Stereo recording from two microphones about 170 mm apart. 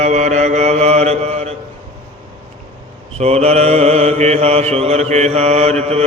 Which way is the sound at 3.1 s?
40° right (ahead or behind).